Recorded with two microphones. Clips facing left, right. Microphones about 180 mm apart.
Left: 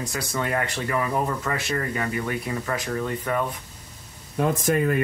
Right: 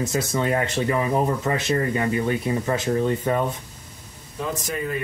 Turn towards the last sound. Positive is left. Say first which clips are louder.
# left 5 dB
turn(degrees=55)  # may be behind; listen again after turning